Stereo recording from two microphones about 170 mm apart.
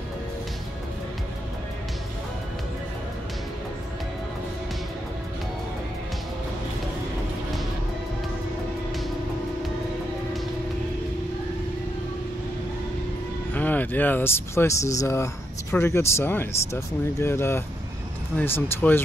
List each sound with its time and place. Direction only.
13.6 s speech: 10° left (ahead or behind)